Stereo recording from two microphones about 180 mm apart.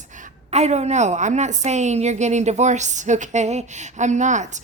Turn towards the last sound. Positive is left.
turn(degrees=-40)  # may be behind; listen again after turning